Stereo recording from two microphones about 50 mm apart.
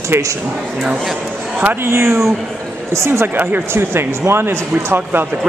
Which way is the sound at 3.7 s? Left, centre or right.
Right.